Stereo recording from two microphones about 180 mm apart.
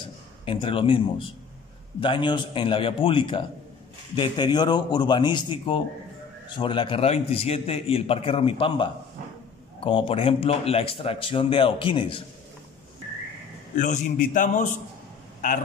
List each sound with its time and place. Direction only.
0.0 s a man's voice: 30° left (ahead or behind)
13.7 s a man's voice: 45° left (ahead or behind)